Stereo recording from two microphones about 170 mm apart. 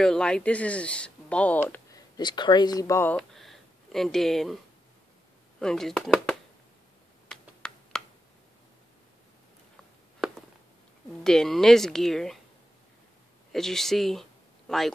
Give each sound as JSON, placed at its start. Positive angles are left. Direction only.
{"t": 0.0, "sound": "speech", "side_deg": 5}
{"t": 1.9, "sound": "speech", "side_deg": 25}
{"t": 3.2, "sound": "a sound", "side_deg": 0}
{"t": 5.6, "sound": "speech", "side_deg": 5}
{"t": 7.2, "sound": "computer keyboard", "side_deg": 5}
{"t": 11.2, "sound": "a woman's voice", "side_deg": 0}
{"t": 13.5, "sound": "a woman's voice", "side_deg": 0}